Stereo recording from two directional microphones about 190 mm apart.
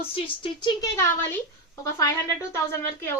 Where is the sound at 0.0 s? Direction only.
30° left (ahead or behind).